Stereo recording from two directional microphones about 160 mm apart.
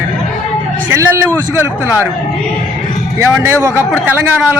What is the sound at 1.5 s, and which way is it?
Speech, 15° right (ahead or behind).